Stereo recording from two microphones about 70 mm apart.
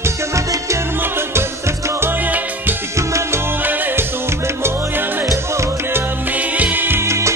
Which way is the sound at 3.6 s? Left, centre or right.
Right.